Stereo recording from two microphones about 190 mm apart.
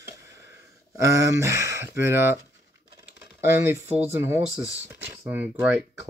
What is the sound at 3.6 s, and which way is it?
Speech, 15° right (ahead or behind).